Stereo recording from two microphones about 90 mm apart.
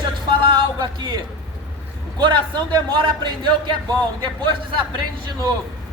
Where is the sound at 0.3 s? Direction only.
60° right (ahead or behind).